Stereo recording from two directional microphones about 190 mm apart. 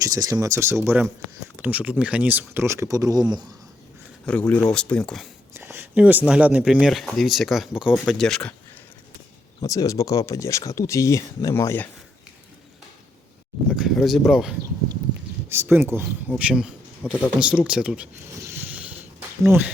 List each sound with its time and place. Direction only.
0.0 s speech: 20° right (ahead or behind)
4.3 s speech: 5° left (ahead or behind)
5.5 s speech: 10° right (ahead or behind)
9.6 s speech: 20° left (ahead or behind)
13.7 s speech: centre (ahead or behind)
15.4 s speech: 10° right (ahead or behind)